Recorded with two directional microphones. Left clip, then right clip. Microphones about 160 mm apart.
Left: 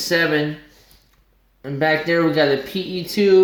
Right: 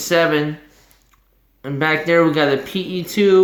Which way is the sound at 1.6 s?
30° right (ahead or behind).